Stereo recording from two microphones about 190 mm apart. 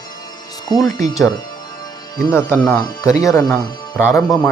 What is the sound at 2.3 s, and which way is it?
Speech, 10° left (ahead or behind).